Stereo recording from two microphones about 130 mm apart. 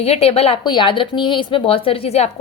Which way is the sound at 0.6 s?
35° left (ahead or behind).